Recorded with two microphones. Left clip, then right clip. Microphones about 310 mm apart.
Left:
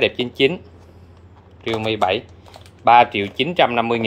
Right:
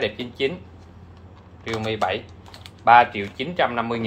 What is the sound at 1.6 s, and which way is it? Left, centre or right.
Speech, left.